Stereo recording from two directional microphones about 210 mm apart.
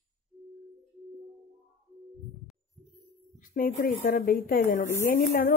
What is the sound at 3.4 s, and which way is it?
A woman's voice, 40° left (ahead or behind).